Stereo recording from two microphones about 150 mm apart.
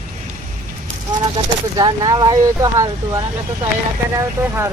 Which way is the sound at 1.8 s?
25° right (ahead or behind).